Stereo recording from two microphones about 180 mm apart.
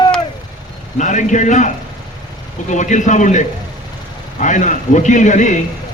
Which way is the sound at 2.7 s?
40° left (ahead or behind).